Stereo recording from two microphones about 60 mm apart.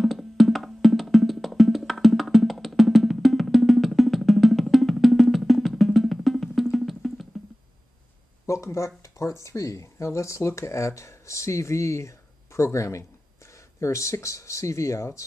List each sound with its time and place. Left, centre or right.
0.0 s music: centre
8.6 s speech: left